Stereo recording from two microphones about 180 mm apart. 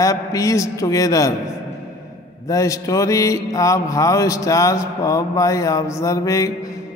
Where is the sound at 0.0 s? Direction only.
20° left (ahead or behind).